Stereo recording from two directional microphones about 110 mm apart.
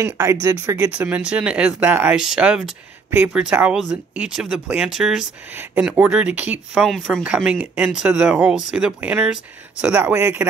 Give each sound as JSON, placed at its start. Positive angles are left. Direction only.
{"t": 0.0, "sound": "speech", "side_deg": -25}
{"t": 0.7, "sound": "speech", "side_deg": -10}
{"t": 5.5, "sound": "speech", "side_deg": -20}
{"t": 7.2, "sound": "speech", "side_deg": -10}
{"t": 7.8, "sound": "speech", "side_deg": -5}